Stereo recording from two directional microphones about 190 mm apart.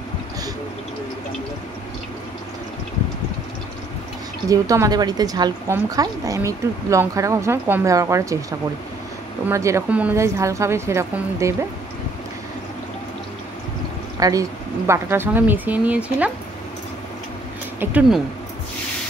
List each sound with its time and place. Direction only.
4.5 s a woman's voice: 20° right (ahead or behind)
14.2 s a woman's voice: 20° right (ahead or behind)
17.7 s speech: 5° right (ahead or behind)